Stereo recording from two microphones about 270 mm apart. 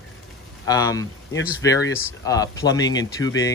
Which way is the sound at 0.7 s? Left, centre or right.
Centre.